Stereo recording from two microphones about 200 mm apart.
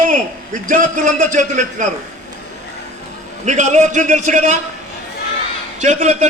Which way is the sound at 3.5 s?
35° right (ahead or behind).